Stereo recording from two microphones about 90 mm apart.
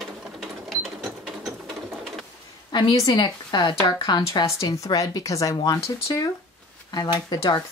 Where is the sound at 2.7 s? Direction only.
55° left (ahead or behind).